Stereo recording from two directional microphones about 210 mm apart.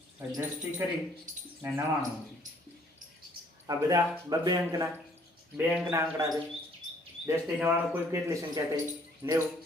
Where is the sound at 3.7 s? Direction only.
15° right (ahead or behind).